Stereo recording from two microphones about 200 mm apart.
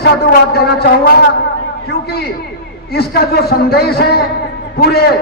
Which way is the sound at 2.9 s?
50° left (ahead or behind).